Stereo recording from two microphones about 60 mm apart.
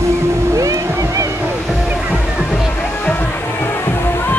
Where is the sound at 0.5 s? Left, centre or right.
Right.